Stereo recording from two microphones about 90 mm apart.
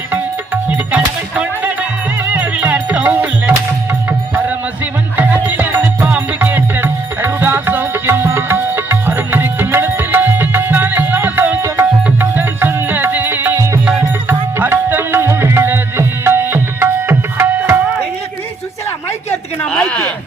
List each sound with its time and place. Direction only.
0.1 s music: 20° right (ahead or behind)
5.1 s music: 20° right (ahead or behind)
19.7 s a sound: 15° left (ahead or behind)